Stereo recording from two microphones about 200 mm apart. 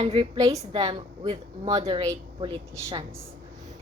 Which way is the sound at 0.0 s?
30° right (ahead or behind).